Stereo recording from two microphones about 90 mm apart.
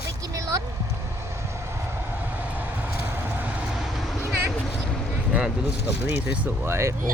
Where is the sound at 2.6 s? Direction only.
20° right (ahead or behind); by 4.2 s 5° right (ahead or behind).